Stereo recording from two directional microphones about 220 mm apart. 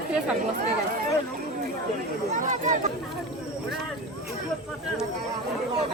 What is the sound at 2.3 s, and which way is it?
Speech, 35° right (ahead or behind).